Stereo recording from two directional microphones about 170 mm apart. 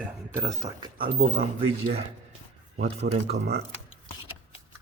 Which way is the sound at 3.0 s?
80° right.